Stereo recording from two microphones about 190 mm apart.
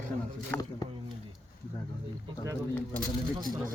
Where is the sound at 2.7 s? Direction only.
5° left (ahead or behind).